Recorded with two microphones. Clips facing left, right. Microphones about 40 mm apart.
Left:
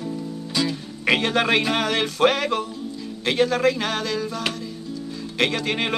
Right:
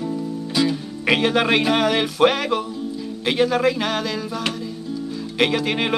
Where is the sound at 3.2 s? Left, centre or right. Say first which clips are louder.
Right 1 dB; centre.